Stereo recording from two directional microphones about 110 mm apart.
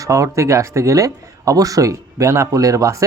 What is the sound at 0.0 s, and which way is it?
Speech, 30° right (ahead or behind).